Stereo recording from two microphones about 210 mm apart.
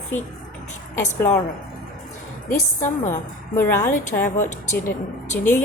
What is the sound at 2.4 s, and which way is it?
Speech, 40° left (ahead or behind).